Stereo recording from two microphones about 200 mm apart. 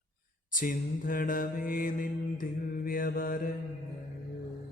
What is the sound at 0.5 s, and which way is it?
Mantra, 45° left (ahead or behind).